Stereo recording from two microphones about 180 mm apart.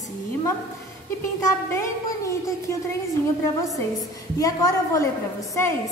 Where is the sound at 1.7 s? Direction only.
15° left (ahead or behind).